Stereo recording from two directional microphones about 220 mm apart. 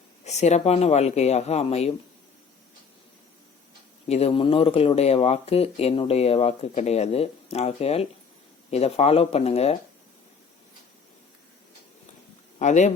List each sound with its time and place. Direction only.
0.3 s speech: 30° left (ahead or behind)
4.1 s speech: 25° left (ahead or behind)
12.5 s speech: 35° left (ahead or behind)